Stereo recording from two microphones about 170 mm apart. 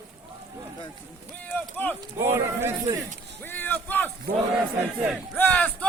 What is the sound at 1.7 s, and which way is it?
Run, 10° left (ahead or behind).